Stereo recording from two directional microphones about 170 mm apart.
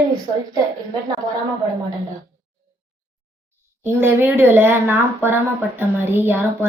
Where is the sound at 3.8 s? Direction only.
15° right (ahead or behind).